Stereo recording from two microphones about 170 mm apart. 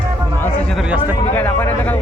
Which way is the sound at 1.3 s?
10° left (ahead or behind).